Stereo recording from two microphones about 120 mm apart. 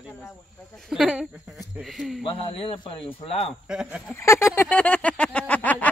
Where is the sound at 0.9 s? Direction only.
5° right (ahead or behind).